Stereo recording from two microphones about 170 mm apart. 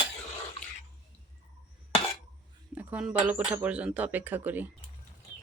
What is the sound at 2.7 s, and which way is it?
Speech, 10° right (ahead or behind).